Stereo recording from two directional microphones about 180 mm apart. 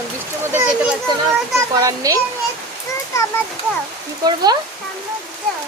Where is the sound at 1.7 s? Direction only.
20° right (ahead or behind).